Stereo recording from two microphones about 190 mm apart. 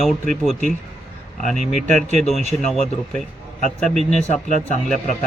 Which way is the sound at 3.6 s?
Centre (ahead or behind).